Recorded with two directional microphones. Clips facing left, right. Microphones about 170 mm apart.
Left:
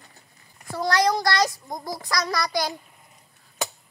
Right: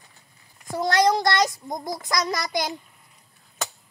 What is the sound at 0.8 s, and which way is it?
A child's voice, 25° right (ahead or behind).